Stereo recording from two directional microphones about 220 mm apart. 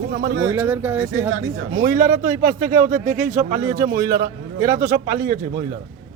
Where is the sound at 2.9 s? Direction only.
35° right (ahead or behind).